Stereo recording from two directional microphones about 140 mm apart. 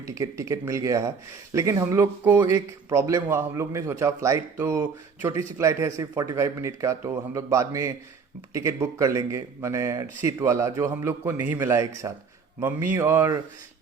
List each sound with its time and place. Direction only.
0.0 s speech: 20° right (ahead or behind)